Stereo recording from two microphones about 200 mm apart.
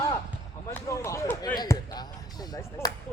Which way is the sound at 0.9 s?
15° left (ahead or behind).